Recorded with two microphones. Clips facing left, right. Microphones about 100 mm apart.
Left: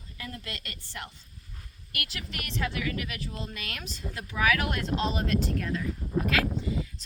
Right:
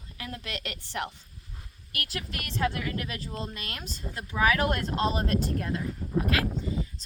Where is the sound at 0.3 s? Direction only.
70° right (ahead or behind).